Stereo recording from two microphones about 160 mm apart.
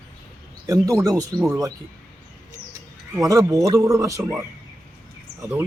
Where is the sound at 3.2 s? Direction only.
20° right (ahead or behind).